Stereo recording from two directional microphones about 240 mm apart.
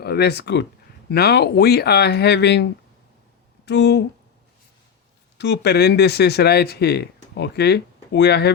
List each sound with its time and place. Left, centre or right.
0.0 s speech: left
3.7 s speech: left
5.4 s speech: left